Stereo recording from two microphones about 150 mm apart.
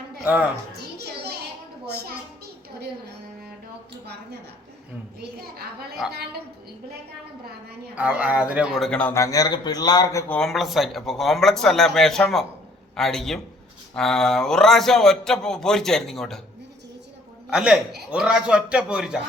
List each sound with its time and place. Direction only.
0.3 s a man's voice: 10° right (ahead or behind)
0.8 s children playing: 90° right
1.9 s a child's voice: 90° right
5.2 s a child's voice: 90° right
7.9 s a man's voice: 10° right (ahead or behind); by 9.1 s 5° left (ahead or behind)
9.1 s a man's voice: 20° left (ahead or behind)
10.3 s speech: centre (ahead or behind)
17.5 s speech: 5° right (ahead or behind)